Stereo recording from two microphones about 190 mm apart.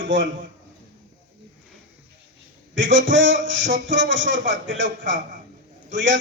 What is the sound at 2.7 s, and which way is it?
A man's voice, 80° right.